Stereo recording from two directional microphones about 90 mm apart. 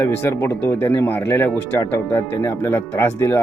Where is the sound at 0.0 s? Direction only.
30° left (ahead or behind).